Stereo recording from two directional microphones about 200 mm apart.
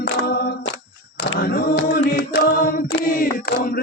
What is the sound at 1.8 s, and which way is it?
Music, 55° left (ahead or behind).